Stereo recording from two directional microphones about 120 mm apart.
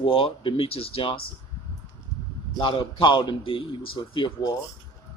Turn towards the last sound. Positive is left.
turn(degrees=45)  # may be behind; listen again after turning